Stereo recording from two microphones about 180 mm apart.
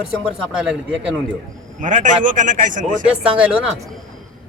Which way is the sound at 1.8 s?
45° right (ahead or behind).